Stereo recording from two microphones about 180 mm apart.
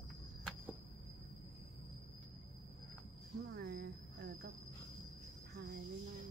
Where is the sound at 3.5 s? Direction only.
65° right (ahead or behind).